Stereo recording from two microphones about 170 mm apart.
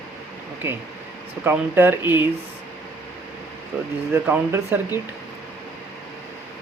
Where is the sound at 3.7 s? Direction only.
10° right (ahead or behind).